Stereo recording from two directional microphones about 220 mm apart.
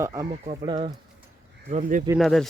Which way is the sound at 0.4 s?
25° right (ahead or behind).